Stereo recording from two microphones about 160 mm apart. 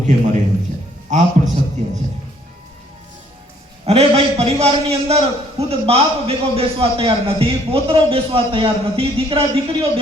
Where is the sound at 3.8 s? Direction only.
40° right (ahead or behind).